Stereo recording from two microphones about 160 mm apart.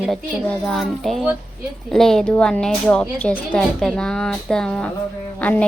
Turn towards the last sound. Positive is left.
turn(degrees=10)  # may be behind; listen again after turning